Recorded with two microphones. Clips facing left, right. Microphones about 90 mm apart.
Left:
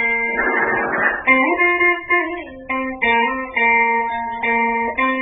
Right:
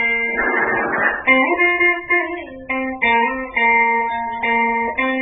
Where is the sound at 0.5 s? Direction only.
40° right (ahead or behind).